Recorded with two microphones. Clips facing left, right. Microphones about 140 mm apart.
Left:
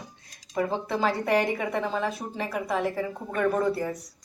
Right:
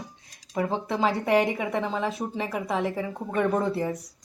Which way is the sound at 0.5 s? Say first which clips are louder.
Even; 20° right (ahead or behind).